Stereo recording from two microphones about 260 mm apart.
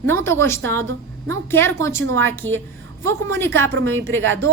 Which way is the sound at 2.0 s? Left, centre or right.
Right.